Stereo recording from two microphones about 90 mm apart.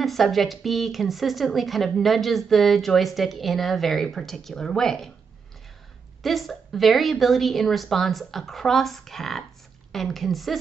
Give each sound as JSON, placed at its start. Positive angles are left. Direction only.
{"t": 0.0, "sound": "speech", "side_deg": 0}
{"t": 6.2, "sound": "speech", "side_deg": 0}